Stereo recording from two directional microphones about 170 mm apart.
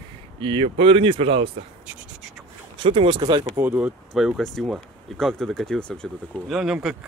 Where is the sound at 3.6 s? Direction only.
10° right (ahead or behind).